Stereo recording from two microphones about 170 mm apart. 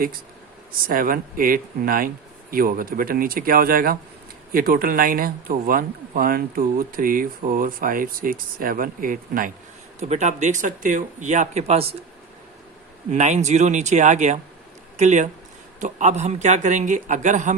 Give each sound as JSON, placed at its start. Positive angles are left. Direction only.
{"t": 0.7, "sound": "speech", "side_deg": -55}
{"t": 10.0, "sound": "speech", "side_deg": -45}
{"t": 13.1, "sound": "speech", "side_deg": -45}